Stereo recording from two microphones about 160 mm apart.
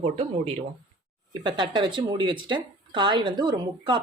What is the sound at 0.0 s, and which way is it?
A woman's voice, 40° right (ahead or behind).